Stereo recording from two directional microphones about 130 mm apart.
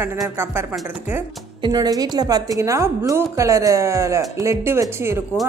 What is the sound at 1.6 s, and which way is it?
A woman's voice, 30° right (ahead or behind).